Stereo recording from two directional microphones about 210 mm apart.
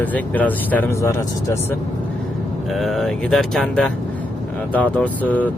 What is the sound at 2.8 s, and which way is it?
Speech, centre (ahead or behind).